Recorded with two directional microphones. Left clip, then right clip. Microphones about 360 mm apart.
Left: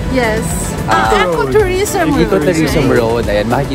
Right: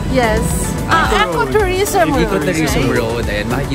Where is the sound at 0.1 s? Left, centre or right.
Centre.